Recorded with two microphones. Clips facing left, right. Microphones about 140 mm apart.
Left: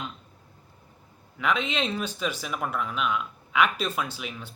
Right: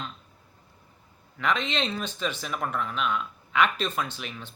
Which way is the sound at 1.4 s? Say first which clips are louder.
Left 1 dB; 10° left (ahead or behind).